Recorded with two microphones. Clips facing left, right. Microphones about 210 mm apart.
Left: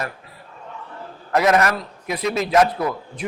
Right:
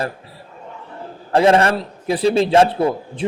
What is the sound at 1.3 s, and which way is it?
A man's voice, 30° right (ahead or behind).